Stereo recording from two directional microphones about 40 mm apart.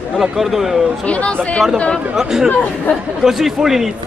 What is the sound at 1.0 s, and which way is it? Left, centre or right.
Speech, left.